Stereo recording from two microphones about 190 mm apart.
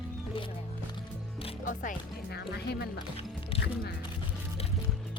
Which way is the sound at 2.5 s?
60° left (ahead or behind).